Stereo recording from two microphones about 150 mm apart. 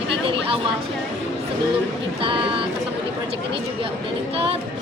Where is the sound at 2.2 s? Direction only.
35° right (ahead or behind).